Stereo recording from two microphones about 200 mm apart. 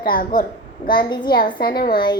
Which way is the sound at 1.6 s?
50° left (ahead or behind).